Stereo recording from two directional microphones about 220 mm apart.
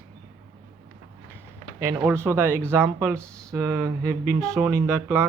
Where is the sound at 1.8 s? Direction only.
15° right (ahead or behind).